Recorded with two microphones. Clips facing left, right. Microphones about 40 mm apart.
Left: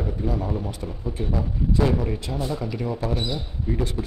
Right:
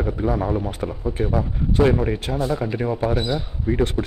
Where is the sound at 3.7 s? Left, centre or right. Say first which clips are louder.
Right 6 dB; right.